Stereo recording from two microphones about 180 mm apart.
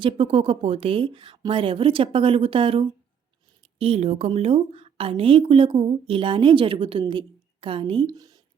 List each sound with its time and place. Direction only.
0.0 s a woman's voice: 30° right (ahead or behind)